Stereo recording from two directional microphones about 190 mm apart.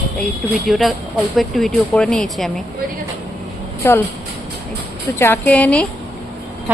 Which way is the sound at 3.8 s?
15° left (ahead or behind).